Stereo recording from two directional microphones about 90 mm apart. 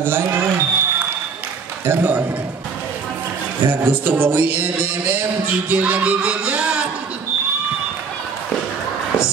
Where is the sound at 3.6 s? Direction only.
20° right (ahead or behind).